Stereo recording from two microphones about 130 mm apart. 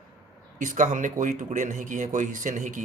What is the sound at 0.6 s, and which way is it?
Speech, 75° right (ahead or behind).